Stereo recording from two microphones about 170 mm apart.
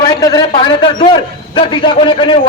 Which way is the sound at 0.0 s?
20° left (ahead or behind).